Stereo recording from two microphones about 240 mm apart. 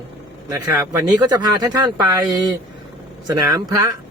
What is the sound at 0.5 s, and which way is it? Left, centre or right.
Speech, centre.